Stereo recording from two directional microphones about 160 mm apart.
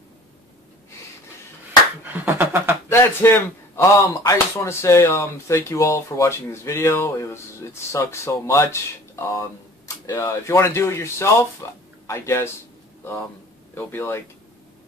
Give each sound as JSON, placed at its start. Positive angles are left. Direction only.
{"t": 2.1, "sound": "a sound", "side_deg": -10}
{"t": 2.9, "sound": "a man's voice", "side_deg": 15}
{"t": 13.7, "sound": "speech", "side_deg": 15}